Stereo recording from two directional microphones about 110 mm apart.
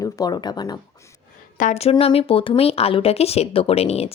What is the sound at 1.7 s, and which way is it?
Speech, 65° left (ahead or behind).